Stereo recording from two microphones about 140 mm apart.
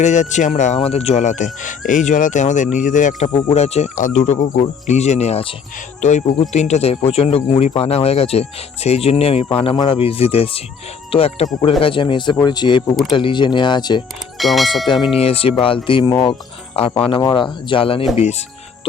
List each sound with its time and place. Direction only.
0.0 s speech: 60° left (ahead or behind)
0.8 s speech: 45° left (ahead or behind); by 3.2 s 65° left (ahead or behind)
3.5 s speech: 50° left (ahead or behind); by 14.0 s 30° left (ahead or behind)
14.3 s speech: centre (ahead or behind)
14.8 s speech: 35° left (ahead or behind)
18.2 s speech: 50° left (ahead or behind)